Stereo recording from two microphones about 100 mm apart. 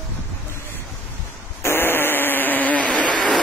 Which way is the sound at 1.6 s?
25° left (ahead or behind).